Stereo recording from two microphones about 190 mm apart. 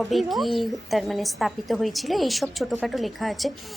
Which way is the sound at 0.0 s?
Centre (ahead or behind).